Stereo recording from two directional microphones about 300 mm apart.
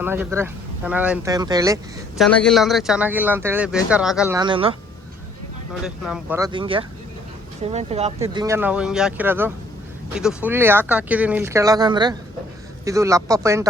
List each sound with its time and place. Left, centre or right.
0.0 s speech: centre
2.2 s speech: centre
4.4 s speech: centre
5.8 s speech: centre